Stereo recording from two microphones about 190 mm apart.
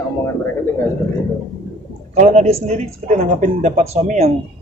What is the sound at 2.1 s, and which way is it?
A man's voice, 35° right (ahead or behind).